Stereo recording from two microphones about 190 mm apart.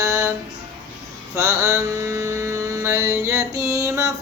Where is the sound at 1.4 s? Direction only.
15° right (ahead or behind).